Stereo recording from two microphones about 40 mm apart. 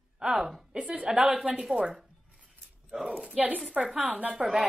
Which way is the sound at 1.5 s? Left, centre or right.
Centre.